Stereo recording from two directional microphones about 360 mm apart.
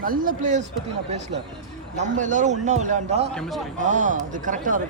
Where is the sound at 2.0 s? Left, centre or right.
Right.